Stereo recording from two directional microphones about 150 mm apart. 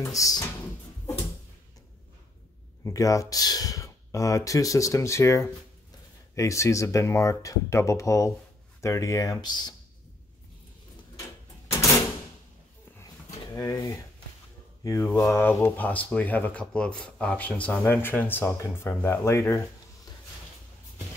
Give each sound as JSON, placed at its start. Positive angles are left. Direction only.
{"t": 0.0, "sound": "speech", "side_deg": 20}
{"t": 2.8, "sound": "speech", "side_deg": 20}
{"t": 13.5, "sound": "speech", "side_deg": 20}
{"t": 14.8, "sound": "mantra", "side_deg": 20}
{"t": 15.0, "sound": "speech", "side_deg": 15}